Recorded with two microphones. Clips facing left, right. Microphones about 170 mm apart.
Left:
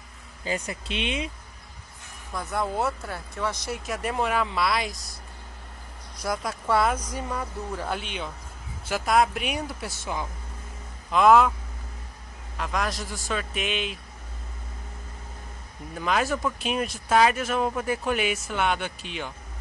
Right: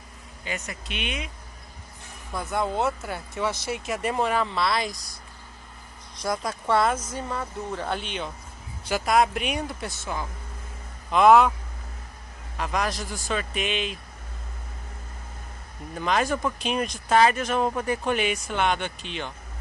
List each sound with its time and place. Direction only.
0.5 s speech: 30° left (ahead or behind)
2.3 s speech: centre (ahead or behind)
6.2 s speech: 5° left (ahead or behind)
11.1 s speech: centre (ahead or behind)
12.5 s speech: centre (ahead or behind)
15.9 s speech: centre (ahead or behind)